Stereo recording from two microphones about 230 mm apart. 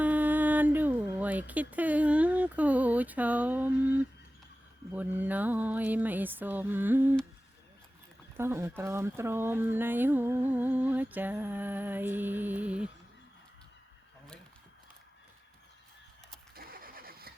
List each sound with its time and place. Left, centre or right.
0.0 s speech: centre
8.4 s speech: centre
16.6 s vehicle: right